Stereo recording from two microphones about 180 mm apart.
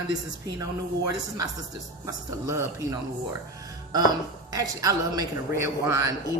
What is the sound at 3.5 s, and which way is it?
Music, 20° right (ahead or behind).